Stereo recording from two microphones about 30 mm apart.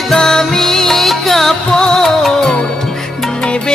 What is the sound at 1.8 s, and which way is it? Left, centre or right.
Music, left.